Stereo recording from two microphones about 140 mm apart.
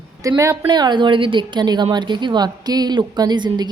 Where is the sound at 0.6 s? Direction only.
30° right (ahead or behind).